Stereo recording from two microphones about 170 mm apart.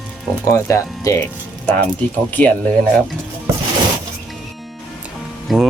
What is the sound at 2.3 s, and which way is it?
Speech, 10° left (ahead or behind).